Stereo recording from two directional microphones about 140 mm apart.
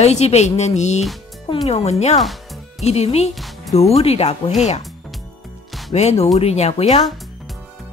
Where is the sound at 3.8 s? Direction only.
45° left (ahead or behind).